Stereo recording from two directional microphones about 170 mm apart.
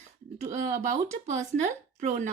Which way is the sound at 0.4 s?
45° right (ahead or behind).